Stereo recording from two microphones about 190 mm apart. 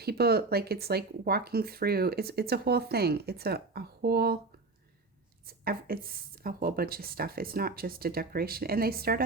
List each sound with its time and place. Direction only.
0.0 s speech: 55° right (ahead or behind)
5.5 s speech: 50° right (ahead or behind)